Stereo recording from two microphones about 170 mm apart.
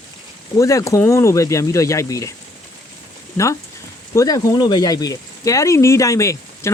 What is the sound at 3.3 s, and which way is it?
Speech, 15° left (ahead or behind).